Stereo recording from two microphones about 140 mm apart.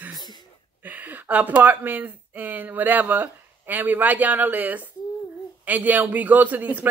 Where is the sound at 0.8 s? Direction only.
10° right (ahead or behind).